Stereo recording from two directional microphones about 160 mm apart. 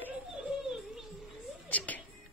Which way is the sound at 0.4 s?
5° right (ahead or behind).